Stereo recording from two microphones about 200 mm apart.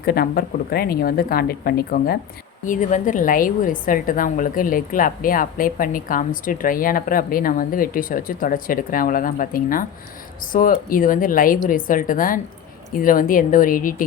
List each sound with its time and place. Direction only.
0.0 s a woman's voice: 50° left (ahead or behind)